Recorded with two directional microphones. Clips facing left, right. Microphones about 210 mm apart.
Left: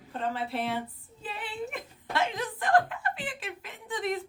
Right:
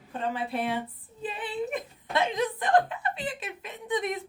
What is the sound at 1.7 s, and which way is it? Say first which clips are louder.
Speech: right 3 dB; 20° right (ahead or behind).